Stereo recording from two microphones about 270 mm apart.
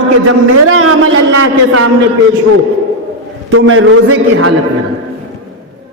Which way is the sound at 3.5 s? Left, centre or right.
Right.